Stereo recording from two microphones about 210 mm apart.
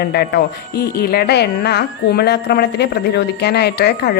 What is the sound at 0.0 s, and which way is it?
Speech, 50° left (ahead or behind).